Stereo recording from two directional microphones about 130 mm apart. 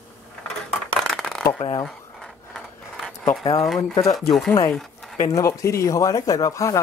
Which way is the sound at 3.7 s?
5° left (ahead or behind).